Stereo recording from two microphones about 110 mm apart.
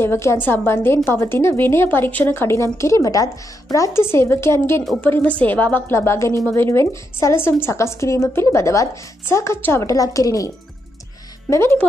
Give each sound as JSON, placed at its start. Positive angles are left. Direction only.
{"t": 0.0, "sound": "a woman's voice", "side_deg": 25}
{"t": 11.5, "sound": "a woman's voice", "side_deg": 25}